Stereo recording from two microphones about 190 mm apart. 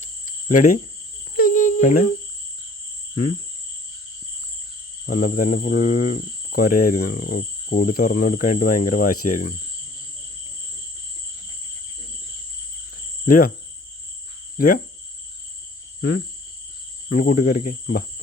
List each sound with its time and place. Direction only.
0.0 s cricket: 45° left (ahead or behind)
5.0 s speech: 45° left (ahead or behind)
13.2 s speech: 45° left (ahead or behind)
17.1 s speech: 45° left (ahead or behind)